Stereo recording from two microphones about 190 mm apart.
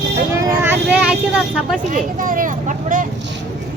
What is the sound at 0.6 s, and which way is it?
Vehicle, 5° right (ahead or behind).